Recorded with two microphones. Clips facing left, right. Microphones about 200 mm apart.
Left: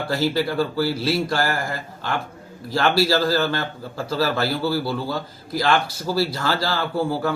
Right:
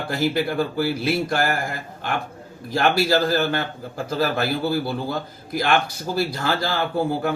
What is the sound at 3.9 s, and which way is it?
Speech, 55° right (ahead or behind).